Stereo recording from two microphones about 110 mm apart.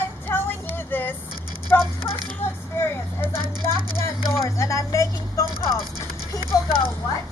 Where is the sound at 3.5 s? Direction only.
40° right (ahead or behind).